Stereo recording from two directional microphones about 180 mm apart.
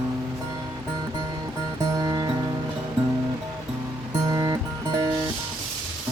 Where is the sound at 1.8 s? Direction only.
20° right (ahead or behind).